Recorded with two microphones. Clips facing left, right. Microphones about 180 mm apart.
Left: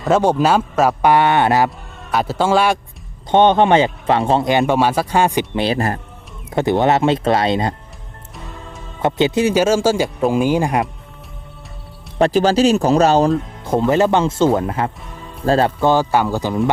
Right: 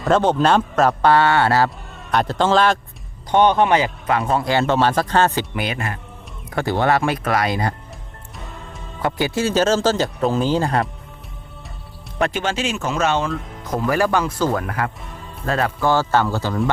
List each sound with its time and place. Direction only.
0.0 s speech: 10° left (ahead or behind)
2.0 s speech: 5° left (ahead or behind)
3.3 s speech: 25° left (ahead or behind)
5.5 s speech: 35° left (ahead or behind)
6.5 s speech: 20° left (ahead or behind)
9.0 s speech: 20° left (ahead or behind)
12.2 s speech: 35° left (ahead or behind)
15.9 s speech: 15° left (ahead or behind)